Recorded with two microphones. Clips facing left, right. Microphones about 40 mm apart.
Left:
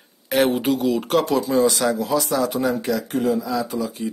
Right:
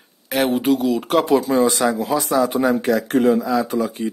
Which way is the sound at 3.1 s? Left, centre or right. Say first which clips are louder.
Right 6 dB; right.